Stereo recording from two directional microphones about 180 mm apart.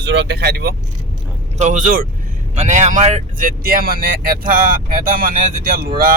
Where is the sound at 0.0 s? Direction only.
75° right (ahead or behind); by 0.8 s 55° right (ahead or behind).